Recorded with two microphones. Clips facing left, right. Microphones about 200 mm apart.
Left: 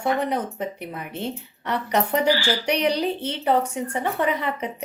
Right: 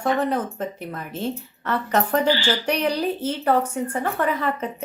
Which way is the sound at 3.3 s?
20° left (ahead or behind).